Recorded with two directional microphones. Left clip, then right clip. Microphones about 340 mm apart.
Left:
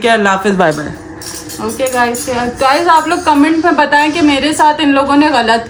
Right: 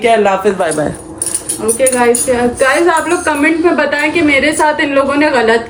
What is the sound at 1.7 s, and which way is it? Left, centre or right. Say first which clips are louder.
Speech: right 2 dB; centre.